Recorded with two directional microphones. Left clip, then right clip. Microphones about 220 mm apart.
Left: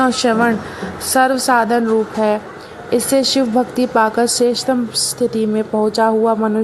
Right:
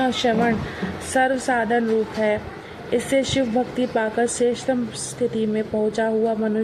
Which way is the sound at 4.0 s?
60° left (ahead or behind).